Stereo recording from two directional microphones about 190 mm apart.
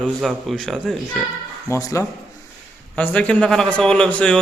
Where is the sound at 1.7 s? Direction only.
15° left (ahead or behind).